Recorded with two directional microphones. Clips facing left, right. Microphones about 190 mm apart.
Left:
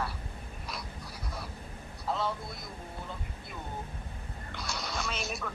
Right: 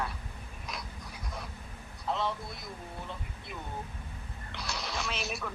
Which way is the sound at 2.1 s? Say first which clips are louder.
Even; 5° left (ahead or behind).